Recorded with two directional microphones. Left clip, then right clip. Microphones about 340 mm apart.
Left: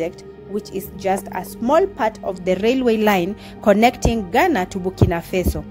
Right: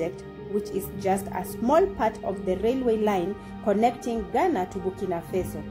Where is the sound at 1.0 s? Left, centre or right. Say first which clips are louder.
Left 6 dB; left.